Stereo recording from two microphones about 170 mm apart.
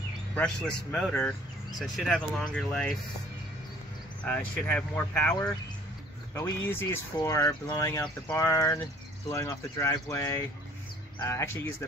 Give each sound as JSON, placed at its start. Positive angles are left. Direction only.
{"t": 0.3, "sound": "speech", "side_deg": 5}
{"t": 4.2, "sound": "speech", "side_deg": 10}